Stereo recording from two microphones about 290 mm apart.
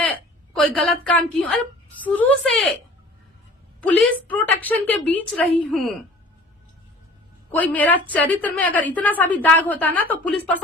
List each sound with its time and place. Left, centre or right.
0.5 s a woman's voice: centre
3.8 s a woman's voice: centre
7.5 s a woman's voice: centre